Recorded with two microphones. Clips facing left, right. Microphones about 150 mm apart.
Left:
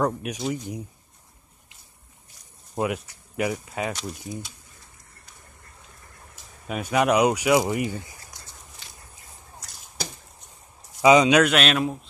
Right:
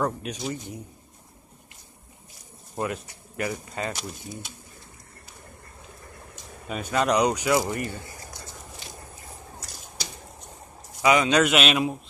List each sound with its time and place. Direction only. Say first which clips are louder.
0.0 s speech: left 3 dB; 10° left (ahead or behind)
2.7 s speech: left 3 dB; 10° left (ahead or behind)
6.3 s speech: left 2 dB; 5° left (ahead or behind)
11.0 s speech: left 5 dB; 20° left (ahead or behind)
11.3 s a man's voice: left 1 dB; centre (ahead or behind)